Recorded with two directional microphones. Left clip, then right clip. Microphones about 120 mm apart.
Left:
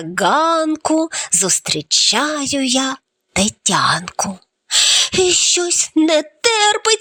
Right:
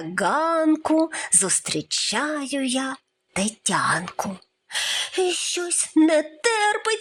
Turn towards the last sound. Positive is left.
turn(degrees=35)  # may be behind; listen again after turning